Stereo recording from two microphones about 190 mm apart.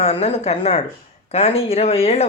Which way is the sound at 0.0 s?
35° left (ahead or behind).